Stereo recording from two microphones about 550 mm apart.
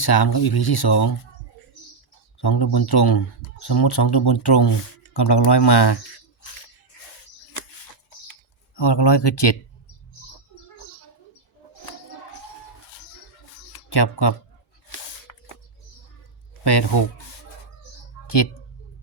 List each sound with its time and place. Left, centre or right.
0.0 s speech: left
2.4 s speech: left
8.3 s typing: left
13.9 s speech: left